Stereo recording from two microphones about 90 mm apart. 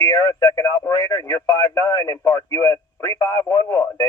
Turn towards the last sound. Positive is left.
turn(degrees=45)  # may be behind; listen again after turning